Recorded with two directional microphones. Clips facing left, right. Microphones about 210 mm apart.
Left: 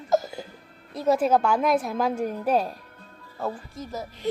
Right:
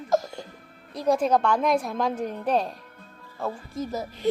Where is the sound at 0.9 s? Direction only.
5° left (ahead or behind).